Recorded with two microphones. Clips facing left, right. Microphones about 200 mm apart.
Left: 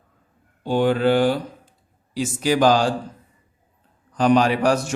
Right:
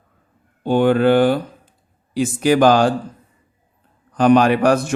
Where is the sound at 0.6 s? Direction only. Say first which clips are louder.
Right 4 dB; 55° right (ahead or behind).